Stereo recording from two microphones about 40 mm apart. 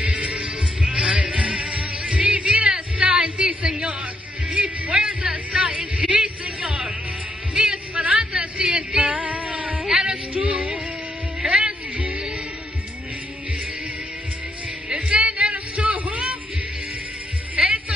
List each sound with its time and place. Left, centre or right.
0.0 s music: right
3.0 s a sound: right
4.5 s speech: right
6.6 s music: right
7.9 s speech: right
8.3 s a sound: right
9.0 s music: right
14.9 s music: right
17.6 s music: centre